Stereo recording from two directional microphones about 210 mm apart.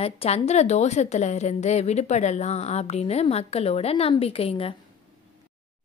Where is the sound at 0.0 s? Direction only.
30° left (ahead or behind).